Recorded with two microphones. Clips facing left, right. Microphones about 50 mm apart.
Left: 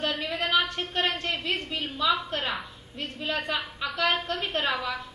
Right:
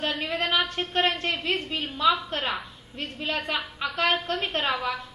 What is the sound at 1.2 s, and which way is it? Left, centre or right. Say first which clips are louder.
Speech: right 2 dB; right.